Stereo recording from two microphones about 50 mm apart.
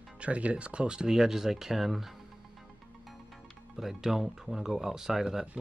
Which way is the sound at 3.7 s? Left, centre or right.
Centre.